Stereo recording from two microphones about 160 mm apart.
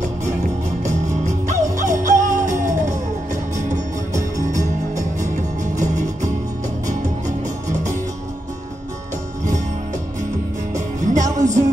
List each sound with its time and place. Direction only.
0.8 s music: 50° right (ahead or behind)
2.5 s music: 20° right (ahead or behind)
3.5 s music: 50° right (ahead or behind)
10.7 s music: 50° right (ahead or behind)